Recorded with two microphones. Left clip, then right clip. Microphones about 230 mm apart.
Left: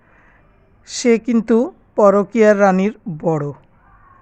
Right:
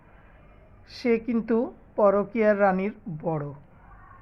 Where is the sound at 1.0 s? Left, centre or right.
Left.